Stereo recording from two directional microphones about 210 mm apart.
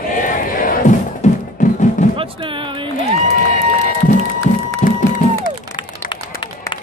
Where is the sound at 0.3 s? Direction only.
40° left (ahead or behind).